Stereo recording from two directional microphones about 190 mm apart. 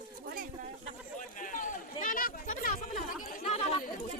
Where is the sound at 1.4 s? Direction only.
45° left (ahead or behind).